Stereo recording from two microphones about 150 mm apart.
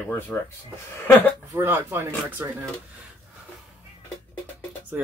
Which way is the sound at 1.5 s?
15° right (ahead or behind).